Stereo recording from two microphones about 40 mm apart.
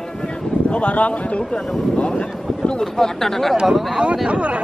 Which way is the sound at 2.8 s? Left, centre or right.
Centre.